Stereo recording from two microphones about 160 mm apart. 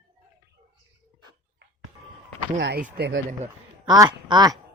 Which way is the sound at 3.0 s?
80° right.